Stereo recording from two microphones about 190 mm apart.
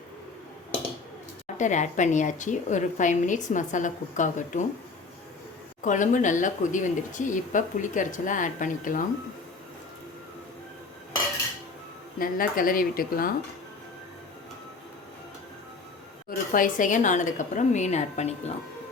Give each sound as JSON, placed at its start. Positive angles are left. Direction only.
{"t": 1.5, "sound": "a woman's voice", "side_deg": 40}
{"t": 5.8, "sound": "speech", "side_deg": 40}
{"t": 12.2, "sound": "speech", "side_deg": 45}
{"t": 16.3, "sound": "a woman's voice", "side_deg": 45}